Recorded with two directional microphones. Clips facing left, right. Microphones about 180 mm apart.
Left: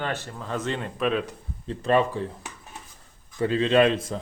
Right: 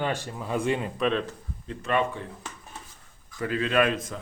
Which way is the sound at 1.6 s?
30° left (ahead or behind).